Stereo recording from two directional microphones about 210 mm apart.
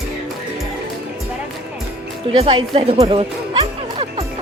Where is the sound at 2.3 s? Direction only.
25° right (ahead or behind).